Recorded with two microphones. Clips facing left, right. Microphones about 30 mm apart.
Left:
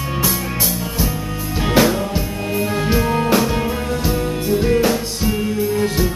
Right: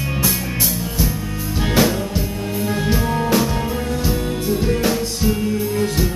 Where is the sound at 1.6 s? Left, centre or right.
Centre.